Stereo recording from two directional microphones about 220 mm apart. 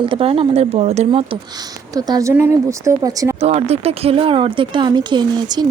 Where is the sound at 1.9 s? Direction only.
15° right (ahead or behind).